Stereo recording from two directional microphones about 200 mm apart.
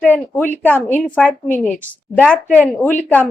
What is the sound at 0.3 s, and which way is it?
A woman's voice, 10° left (ahead or behind).